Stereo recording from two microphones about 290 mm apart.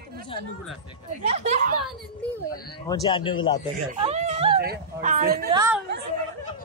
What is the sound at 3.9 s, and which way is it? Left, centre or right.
Speech, right.